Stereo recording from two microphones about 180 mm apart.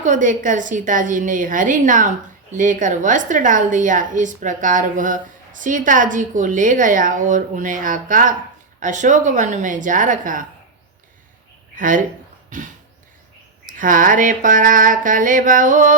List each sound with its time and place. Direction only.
0.0 s a woman's voice: 45° right (ahead or behind)
11.8 s a woman's voice: 45° right (ahead or behind)
12.5 s a sound: 45° right (ahead or behind)
13.7 s a woman's voice: 50° right (ahead or behind)